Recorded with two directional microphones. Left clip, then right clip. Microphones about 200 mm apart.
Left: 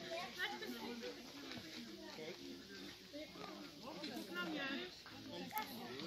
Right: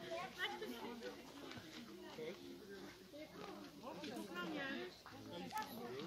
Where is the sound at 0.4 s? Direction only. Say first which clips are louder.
Left 1 dB; 50° right (ahead or behind).